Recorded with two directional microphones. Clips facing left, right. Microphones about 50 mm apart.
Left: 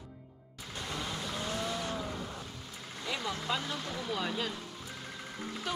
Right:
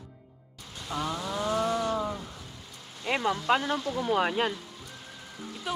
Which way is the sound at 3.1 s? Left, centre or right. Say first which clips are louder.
Right 9 dB; right.